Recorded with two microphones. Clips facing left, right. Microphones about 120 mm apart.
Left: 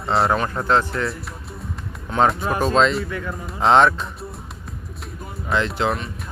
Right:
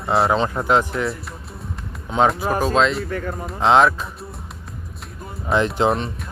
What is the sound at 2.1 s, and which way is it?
Speech, centre (ahead or behind).